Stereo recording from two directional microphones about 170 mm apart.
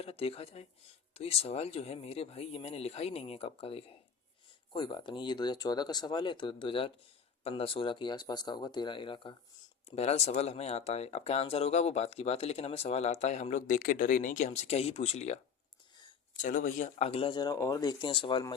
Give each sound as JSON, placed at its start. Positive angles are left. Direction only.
{"t": 0.0, "sound": "speech", "side_deg": 35}
{"t": 9.9, "sound": "speech", "side_deg": 40}
{"t": 16.4, "sound": "speech", "side_deg": 50}